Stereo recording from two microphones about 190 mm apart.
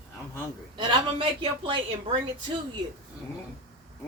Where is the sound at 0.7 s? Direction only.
25° right (ahead or behind).